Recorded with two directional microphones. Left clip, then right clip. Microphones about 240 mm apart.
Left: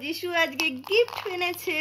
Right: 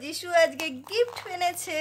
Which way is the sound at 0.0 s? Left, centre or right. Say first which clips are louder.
Right 3 dB; centre.